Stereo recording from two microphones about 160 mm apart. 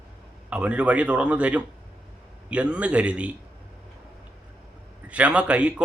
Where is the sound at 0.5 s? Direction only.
10° right (ahead or behind).